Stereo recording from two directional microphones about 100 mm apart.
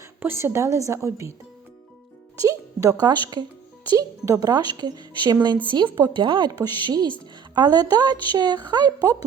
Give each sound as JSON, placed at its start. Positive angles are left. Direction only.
{"t": 0.2, "sound": "a woman's voice", "side_deg": -20}
{"t": 2.4, "sound": "speech", "side_deg": -35}
{"t": 6.5, "sound": "speech", "side_deg": -40}